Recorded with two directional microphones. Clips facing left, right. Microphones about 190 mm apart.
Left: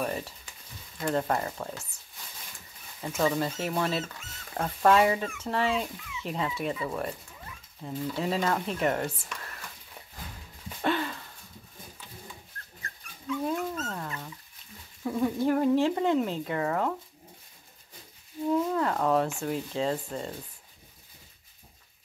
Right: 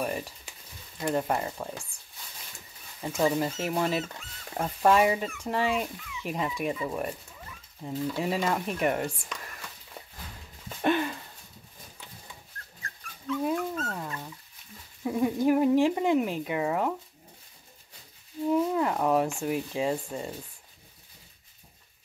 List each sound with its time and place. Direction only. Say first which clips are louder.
0.0 s speech: even; 15° right (ahead or behind)
3.0 s speech: right 1 dB; 15° right (ahead or behind)
10.8 s a sound: right 3 dB; 15° right (ahead or behind)
13.8 s dog: right 1 dB; 10° right (ahead or behind)
15.0 s a sound: right 2 dB; 10° right (ahead or behind)
18.5 s whale vocalization: right 1 dB; 15° right (ahead or behind)
19.4 s speech: right 1 dB; 15° right (ahead or behind)